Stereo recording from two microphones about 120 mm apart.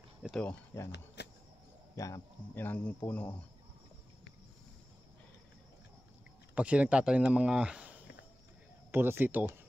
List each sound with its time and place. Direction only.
0.2 s a sound: 5° right (ahead or behind)
0.7 s a man's voice: 20° left (ahead or behind)
2.0 s a man's voice: 25° left (ahead or behind)
2.6 s speech: 15° left (ahead or behind)
6.5 s speech: 10° right (ahead or behind)